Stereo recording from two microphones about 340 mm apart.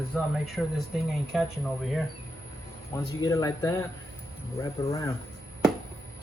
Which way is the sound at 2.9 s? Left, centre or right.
Centre.